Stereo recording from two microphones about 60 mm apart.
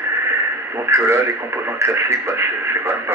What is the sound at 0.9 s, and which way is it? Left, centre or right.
Speech, right.